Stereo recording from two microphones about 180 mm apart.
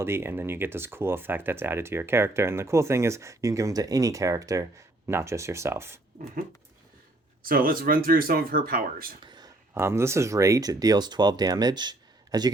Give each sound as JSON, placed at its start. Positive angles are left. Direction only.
{"t": 0.0, "sound": "speech", "side_deg": -15}
{"t": 7.4, "sound": "speech", "side_deg": -55}
{"t": 9.2, "sound": "a sound", "side_deg": -25}
{"t": 9.7, "sound": "speech", "side_deg": -15}